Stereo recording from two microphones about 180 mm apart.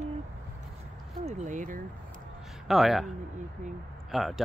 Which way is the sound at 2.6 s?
Centre (ahead or behind).